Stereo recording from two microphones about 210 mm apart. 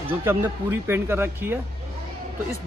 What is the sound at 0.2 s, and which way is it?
Speech, 10° right (ahead or behind).